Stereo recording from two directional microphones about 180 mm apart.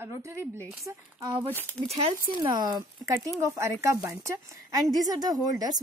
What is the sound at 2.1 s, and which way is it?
Speech, 25° right (ahead or behind).